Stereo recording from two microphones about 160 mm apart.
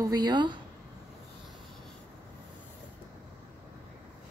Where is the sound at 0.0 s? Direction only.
25° right (ahead or behind).